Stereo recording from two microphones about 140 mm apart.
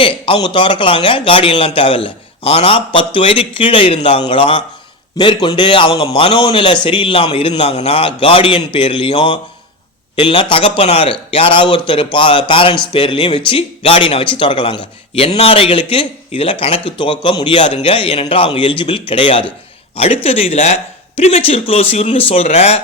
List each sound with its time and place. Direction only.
0.0 s speech: 40° left (ahead or behind)